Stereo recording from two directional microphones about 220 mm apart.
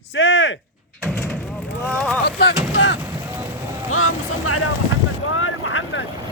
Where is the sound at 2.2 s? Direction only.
50° left (ahead or behind).